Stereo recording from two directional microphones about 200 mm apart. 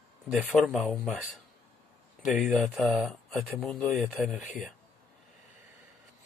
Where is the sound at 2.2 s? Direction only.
Centre (ahead or behind).